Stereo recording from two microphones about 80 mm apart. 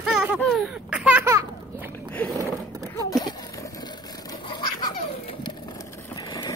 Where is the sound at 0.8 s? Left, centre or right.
Centre.